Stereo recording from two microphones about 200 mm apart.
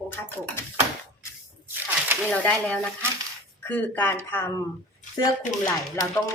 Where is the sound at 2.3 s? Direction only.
5° left (ahead or behind).